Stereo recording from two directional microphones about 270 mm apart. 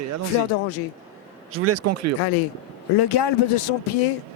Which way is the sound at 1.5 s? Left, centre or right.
Right.